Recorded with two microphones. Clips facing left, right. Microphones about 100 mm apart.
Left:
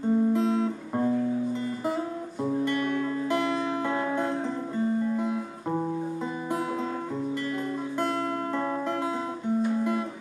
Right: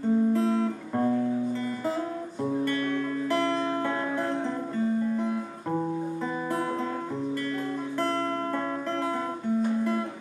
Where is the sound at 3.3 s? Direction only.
15° left (ahead or behind).